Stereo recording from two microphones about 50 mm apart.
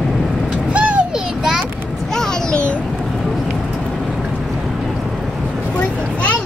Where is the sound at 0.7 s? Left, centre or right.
Right.